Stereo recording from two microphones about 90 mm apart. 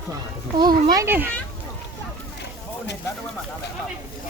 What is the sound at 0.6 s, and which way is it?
Speech, 55° right (ahead or behind).